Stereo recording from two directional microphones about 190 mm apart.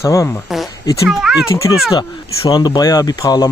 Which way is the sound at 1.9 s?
25° left (ahead or behind).